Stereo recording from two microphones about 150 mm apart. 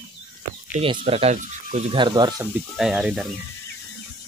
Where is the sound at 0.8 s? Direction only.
40° right (ahead or behind).